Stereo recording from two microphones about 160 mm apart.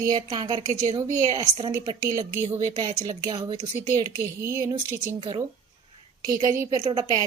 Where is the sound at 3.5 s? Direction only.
45° right (ahead or behind).